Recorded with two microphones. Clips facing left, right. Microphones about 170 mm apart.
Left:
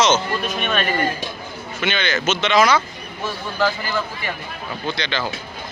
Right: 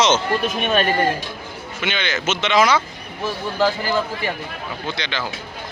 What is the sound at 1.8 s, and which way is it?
Speech, 15° right (ahead or behind).